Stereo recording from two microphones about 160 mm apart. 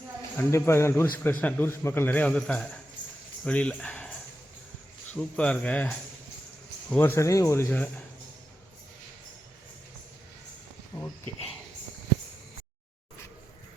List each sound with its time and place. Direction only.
0.3 s a man's voice: 15° left (ahead or behind)